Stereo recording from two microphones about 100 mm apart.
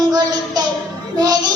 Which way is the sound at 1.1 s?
40° right (ahead or behind).